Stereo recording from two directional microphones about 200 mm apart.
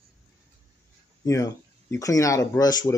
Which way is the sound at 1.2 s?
15° left (ahead or behind).